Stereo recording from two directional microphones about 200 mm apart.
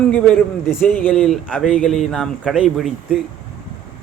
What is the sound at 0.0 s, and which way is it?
Speech, 5° left (ahead or behind).